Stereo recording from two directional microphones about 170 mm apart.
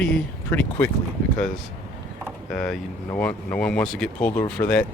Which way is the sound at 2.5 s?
5° left (ahead or behind).